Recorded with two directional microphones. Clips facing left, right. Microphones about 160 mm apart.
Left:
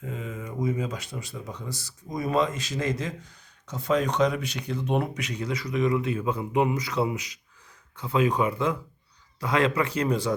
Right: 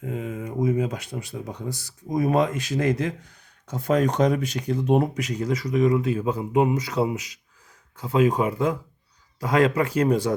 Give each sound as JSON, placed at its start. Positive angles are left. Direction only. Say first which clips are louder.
{"t": 0.0, "sound": "speech", "louder": "right 5 dB", "side_deg": -55}